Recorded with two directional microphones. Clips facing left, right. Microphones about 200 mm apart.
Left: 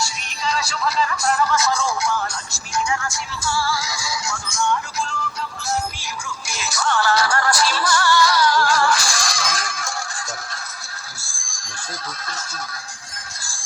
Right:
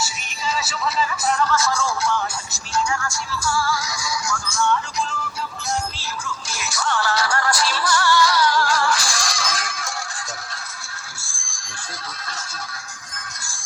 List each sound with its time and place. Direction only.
0.0 s music: 5° right (ahead or behind)
1.5 s speech: 20° left (ahead or behind)
2.7 s music: 20° left (ahead or behind)
6.0 s music: 15° left (ahead or behind)
6.7 s music: 45° left (ahead or behind)
11.2 s a sound: 35° left (ahead or behind)